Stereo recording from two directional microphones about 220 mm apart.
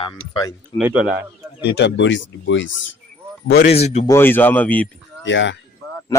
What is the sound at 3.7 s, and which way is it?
Speech, 30° left (ahead or behind).